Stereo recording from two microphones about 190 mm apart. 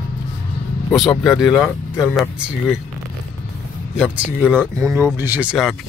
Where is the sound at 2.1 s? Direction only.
Centre (ahead or behind).